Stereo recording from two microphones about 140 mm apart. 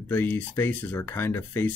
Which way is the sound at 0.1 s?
15° left (ahead or behind).